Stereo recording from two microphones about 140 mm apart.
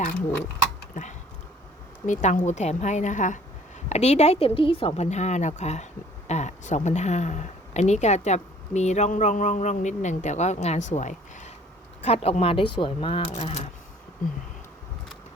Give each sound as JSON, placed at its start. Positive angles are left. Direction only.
{"t": 0.9, "sound": "speech", "side_deg": 65}
{"t": 3.8, "sound": "a woman's voice", "side_deg": 50}
{"t": 5.0, "sound": "speech", "side_deg": 55}
{"t": 12.0, "sound": "speech", "side_deg": 45}